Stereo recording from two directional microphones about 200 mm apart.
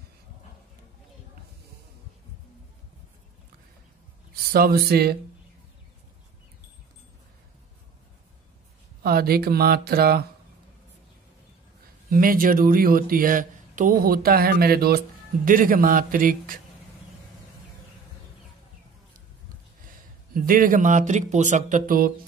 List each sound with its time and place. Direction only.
4.5 s speech: 50° right (ahead or behind)
9.0 s speech: 50° right (ahead or behind)
12.1 s speech: 45° right (ahead or behind)
20.3 s speech: 45° right (ahead or behind)